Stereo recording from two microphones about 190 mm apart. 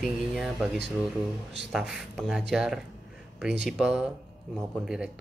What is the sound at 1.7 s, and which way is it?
Speech, centre (ahead or behind).